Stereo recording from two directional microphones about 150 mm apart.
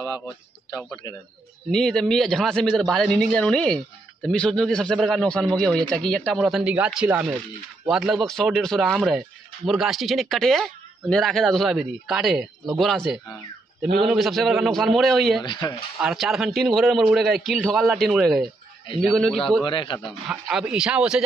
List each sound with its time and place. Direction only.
1.7 s a man's voice: 5° left (ahead or behind)
15.4 s speech: 25° left (ahead or behind)
16.0 s a man's voice: 5° right (ahead or behind)
19.6 s a man's voice: 35° left (ahead or behind)
20.0 s a man's voice: centre (ahead or behind)